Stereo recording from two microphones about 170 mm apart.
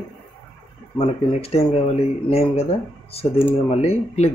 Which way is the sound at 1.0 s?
35° left (ahead or behind).